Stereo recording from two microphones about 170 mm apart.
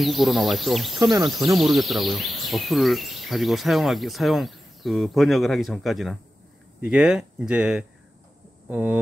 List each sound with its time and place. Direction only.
0.0 s speech: centre (ahead or behind)
1.1 s speech: 20° right (ahead or behind)
1.6 s speech: centre (ahead or behind)